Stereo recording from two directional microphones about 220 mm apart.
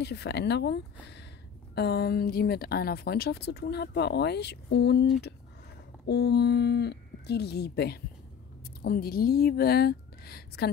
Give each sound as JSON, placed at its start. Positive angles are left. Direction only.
{"t": 0.0, "sound": "speech", "side_deg": 50}
{"t": 6.0, "sound": "a woman's voice", "side_deg": 50}